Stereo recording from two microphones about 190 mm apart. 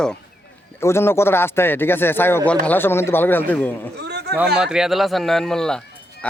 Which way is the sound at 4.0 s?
60° right (ahead or behind).